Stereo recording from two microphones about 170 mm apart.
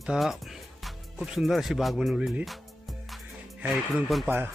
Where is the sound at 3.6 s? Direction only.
Centre (ahead or behind).